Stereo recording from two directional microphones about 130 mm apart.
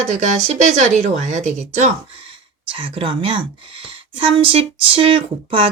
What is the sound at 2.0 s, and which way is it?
Speech, 45° right (ahead or behind).